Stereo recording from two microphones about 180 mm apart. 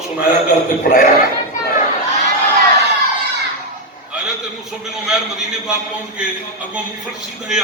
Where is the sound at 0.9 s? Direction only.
55° left (ahead or behind).